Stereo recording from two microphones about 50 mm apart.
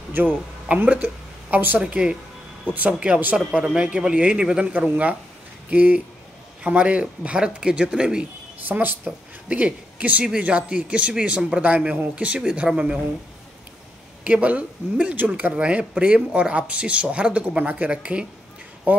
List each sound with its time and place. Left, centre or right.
0.1 s speech: right
1.8 s a man's voice: centre
2.6 s a man's voice: right; by 4.7 s centre
4.7 s a man's voice: right
8.6 s a man's voice: right
12.4 s speech: centre
14.2 s a man's voice: right